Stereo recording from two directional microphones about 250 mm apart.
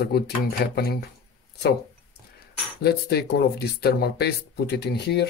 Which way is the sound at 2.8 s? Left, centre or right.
Left.